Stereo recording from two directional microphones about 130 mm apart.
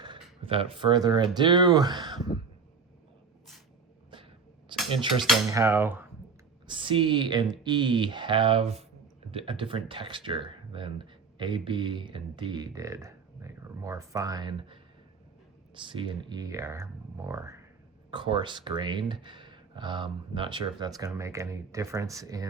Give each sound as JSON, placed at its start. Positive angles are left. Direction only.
{"t": 0.0, "sound": "speech", "side_deg": -40}
{"t": 4.7, "sound": "cutlery", "side_deg": -40}
{"t": 5.5, "sound": "dishes", "side_deg": -20}
{"t": 6.7, "sound": "speech", "side_deg": -40}
{"t": 18.1, "sound": "speech", "side_deg": -40}